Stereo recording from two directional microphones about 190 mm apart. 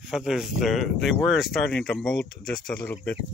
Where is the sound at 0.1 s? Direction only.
Centre (ahead or behind).